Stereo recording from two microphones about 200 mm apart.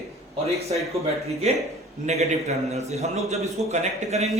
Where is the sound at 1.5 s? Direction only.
35° right (ahead or behind).